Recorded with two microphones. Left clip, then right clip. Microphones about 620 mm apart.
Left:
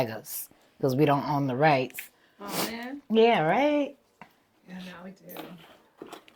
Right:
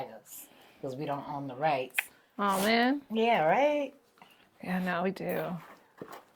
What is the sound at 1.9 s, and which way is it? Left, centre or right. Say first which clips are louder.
Speech: right 10 dB; right.